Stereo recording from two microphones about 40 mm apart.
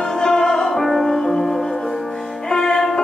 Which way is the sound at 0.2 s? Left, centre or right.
Centre.